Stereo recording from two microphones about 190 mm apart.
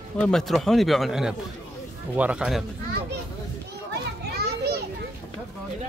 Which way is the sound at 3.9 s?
60° right (ahead or behind).